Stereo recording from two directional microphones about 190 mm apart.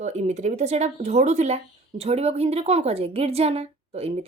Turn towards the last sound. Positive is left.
turn(degrees=-30)  # may be behind; listen again after turning